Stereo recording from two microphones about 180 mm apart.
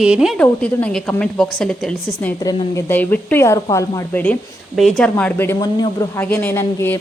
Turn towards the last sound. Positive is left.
turn(degrees=10)  # may be behind; listen again after turning